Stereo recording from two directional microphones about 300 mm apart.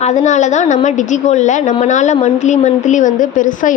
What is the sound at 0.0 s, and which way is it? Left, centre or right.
A woman's voice, left.